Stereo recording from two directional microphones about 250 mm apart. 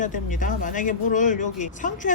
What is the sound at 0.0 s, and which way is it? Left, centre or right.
Speech, left.